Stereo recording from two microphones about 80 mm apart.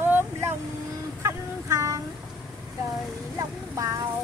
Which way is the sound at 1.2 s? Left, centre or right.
Right.